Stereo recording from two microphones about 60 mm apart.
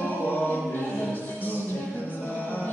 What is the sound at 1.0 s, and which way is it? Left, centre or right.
Music, left.